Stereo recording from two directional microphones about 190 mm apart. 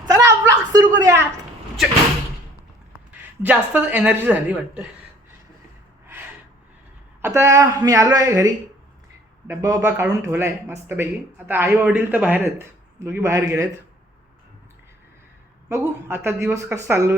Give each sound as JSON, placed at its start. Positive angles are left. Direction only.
{"t": 0.0, "sound": "a sound", "side_deg": -20}
{"t": 2.9, "sound": "speech", "side_deg": -10}
{"t": 6.1, "sound": "gasp", "side_deg": -10}
{"t": 7.2, "sound": "speech", "side_deg": -15}
{"t": 15.7, "sound": "speech", "side_deg": -15}